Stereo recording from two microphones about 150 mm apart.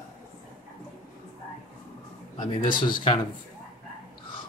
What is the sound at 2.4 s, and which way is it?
Speech, 30° left (ahead or behind).